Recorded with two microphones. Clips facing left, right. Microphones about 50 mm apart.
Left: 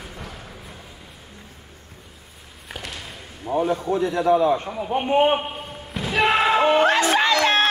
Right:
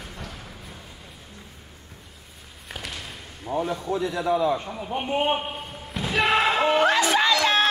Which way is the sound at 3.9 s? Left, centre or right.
Left.